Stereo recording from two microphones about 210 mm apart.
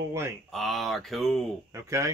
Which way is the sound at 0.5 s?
Centre (ahead or behind).